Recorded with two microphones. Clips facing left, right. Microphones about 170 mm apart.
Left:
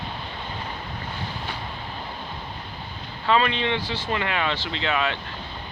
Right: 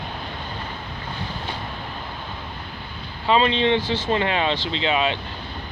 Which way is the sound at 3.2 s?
20° right (ahead or behind).